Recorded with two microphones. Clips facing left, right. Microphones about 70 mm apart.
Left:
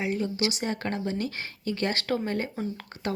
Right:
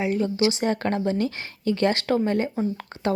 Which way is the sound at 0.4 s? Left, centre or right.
Right.